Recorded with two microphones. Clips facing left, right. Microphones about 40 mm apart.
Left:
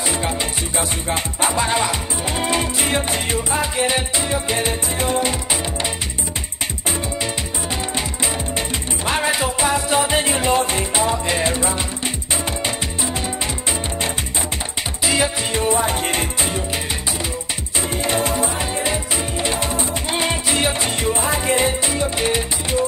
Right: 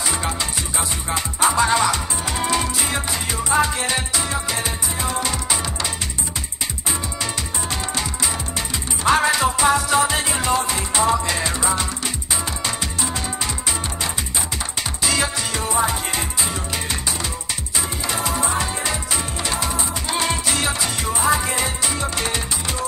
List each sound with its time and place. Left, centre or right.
0.7 s music: left
1.5 s music: centre; by 3.3 s left
3.6 s music: left
9.0 s music: left
15.0 s music: left
18.0 s music: left
18.6 s music: left